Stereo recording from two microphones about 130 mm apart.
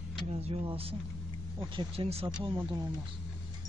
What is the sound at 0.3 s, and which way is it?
Speech, 50° right (ahead or behind).